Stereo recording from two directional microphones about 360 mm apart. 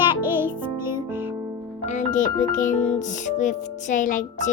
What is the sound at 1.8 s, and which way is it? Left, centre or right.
Speech, centre.